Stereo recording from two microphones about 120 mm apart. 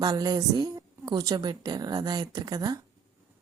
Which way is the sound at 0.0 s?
35° right (ahead or behind).